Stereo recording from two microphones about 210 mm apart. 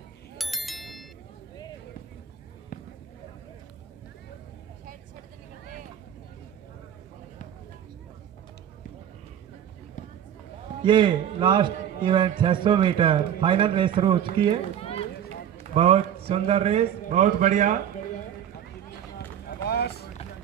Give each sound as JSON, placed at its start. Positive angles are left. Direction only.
{"t": 0.4, "sound": "bicycle bell", "side_deg": 0}
{"t": 2.7, "sound": "a sound", "side_deg": 40}
{"t": 10.8, "sound": "a man's voice", "side_deg": -20}
{"t": 14.8, "sound": "run", "side_deg": 25}
{"t": 15.6, "sound": "a man's voice", "side_deg": -30}
{"t": 19.1, "sound": "run", "side_deg": 50}